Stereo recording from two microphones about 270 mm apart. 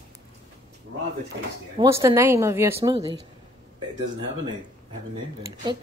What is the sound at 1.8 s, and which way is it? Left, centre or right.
Speech, centre.